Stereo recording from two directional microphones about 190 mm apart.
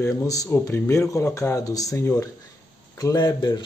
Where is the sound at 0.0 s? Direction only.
15° left (ahead or behind).